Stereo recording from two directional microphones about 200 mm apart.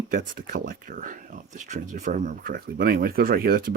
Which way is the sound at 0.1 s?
50° right (ahead or behind).